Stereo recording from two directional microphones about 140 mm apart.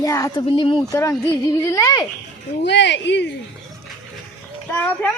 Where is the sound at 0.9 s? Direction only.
20° left (ahead or behind).